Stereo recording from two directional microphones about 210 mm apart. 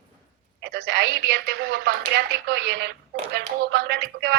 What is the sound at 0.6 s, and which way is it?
A woman's voice, 50° right (ahead or behind).